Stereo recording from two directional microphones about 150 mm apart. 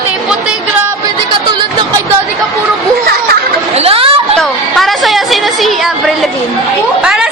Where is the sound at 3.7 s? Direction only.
40° right (ahead or behind).